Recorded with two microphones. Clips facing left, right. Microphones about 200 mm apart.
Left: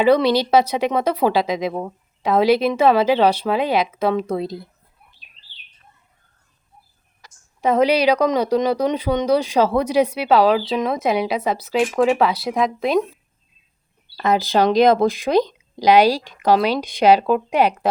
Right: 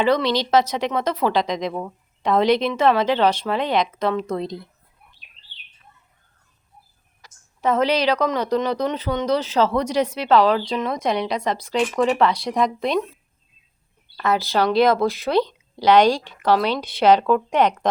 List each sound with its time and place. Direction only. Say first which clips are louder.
0.0 s a woman's voice: left 4 dB; 10° left (ahead or behind)
7.6 s a woman's voice: left 3 dB; 10° left (ahead or behind)
14.3 s a woman's voice: left 3 dB; 15° left (ahead or behind)